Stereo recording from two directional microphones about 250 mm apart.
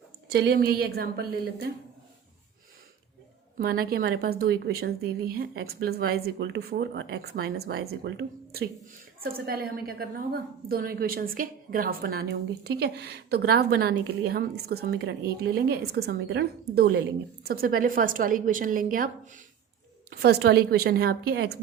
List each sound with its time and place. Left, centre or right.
0.3 s a woman's voice: right
3.6 s a woman's voice: right